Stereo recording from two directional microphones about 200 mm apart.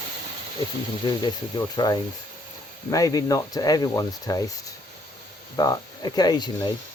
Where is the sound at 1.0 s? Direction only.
20° left (ahead or behind).